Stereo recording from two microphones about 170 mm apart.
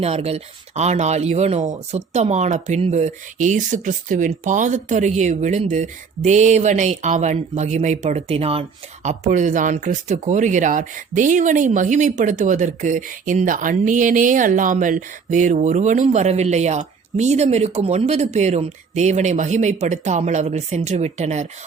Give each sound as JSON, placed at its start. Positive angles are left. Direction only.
{"t": 0.0, "sound": "speech", "side_deg": -35}